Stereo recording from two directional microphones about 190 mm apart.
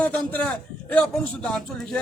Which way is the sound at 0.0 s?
5° left (ahead or behind).